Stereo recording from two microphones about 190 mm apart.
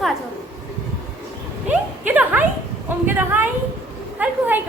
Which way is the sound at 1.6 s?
10° right (ahead or behind).